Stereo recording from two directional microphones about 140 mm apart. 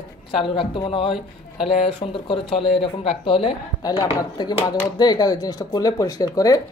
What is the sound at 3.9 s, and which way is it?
A man's voice, 30° left (ahead or behind).